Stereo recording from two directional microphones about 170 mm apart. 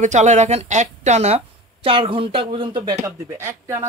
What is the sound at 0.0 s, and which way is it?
A woman's voice, 45° right (ahead or behind).